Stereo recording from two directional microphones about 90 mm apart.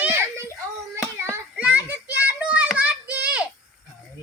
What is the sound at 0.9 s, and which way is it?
Hands, 30° right (ahead or behind).